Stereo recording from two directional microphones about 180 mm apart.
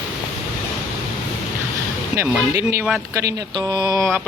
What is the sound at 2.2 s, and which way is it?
Speech, 15° right (ahead or behind).